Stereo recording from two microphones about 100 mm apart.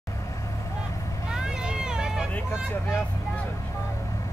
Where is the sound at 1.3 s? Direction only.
5° right (ahead or behind).